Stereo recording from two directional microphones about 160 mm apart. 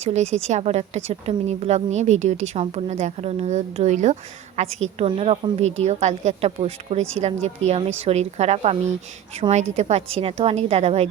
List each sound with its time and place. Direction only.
0.0 s a woman's voice: 45° right (ahead or behind)